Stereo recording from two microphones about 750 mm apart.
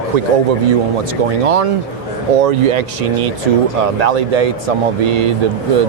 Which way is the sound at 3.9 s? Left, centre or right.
Right.